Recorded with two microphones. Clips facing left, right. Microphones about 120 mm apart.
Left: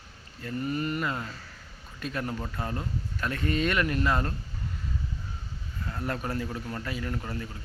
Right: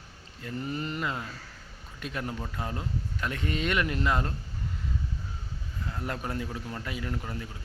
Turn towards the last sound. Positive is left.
turn(degrees=-10)  # may be behind; listen again after turning